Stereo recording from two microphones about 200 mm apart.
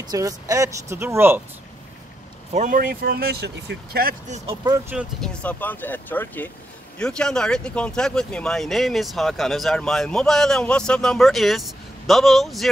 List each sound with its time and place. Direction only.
0.0 s speech: 20° right (ahead or behind)
2.5 s speech: 40° right (ahead or behind)
4.6 s speech: 15° right (ahead or behind)
4.9 s speech: 5° left (ahead or behind)